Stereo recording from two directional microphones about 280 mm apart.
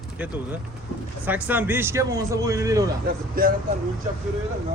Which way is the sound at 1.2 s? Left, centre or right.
Centre.